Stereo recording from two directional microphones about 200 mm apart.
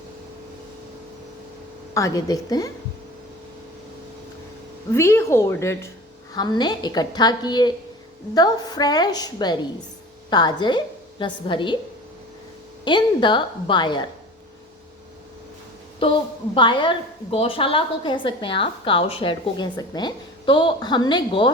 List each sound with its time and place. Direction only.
1.9 s a woman's voice: 15° left (ahead or behind)
4.9 s a woman's voice: 15° left (ahead or behind)
12.8 s a woman's voice: 25° left (ahead or behind)
16.6 s a woman's voice: 25° left (ahead or behind)